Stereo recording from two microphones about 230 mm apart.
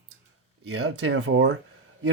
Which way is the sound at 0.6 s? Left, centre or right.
Right.